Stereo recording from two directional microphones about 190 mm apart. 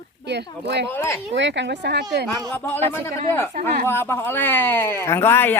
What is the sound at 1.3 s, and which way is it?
Speech, 70° right (ahead or behind).